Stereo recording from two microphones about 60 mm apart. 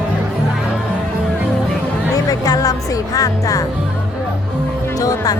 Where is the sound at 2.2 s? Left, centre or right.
Left.